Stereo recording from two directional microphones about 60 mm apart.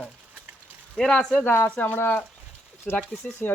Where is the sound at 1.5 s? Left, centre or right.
Left.